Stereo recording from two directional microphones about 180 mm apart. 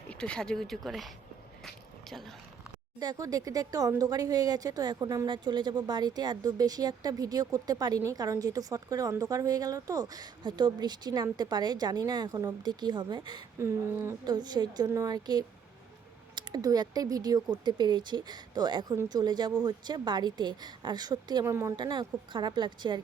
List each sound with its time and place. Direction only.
0.1 s speech: 5° left (ahead or behind)
1.6 s a sound: centre (ahead or behind)
3.0 s speech: 20° right (ahead or behind)